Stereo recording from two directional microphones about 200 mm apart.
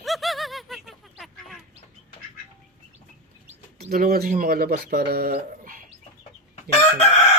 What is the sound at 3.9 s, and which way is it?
Speech, 50° right (ahead or behind).